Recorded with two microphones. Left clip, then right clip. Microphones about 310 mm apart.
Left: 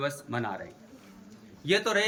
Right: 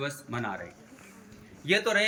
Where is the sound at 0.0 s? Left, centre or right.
Centre.